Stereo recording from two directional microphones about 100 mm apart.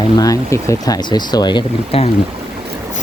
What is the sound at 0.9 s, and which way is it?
Speech, 45° left (ahead or behind).